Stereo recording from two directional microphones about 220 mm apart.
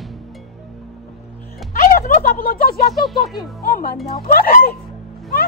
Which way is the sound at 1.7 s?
40° left (ahead or behind).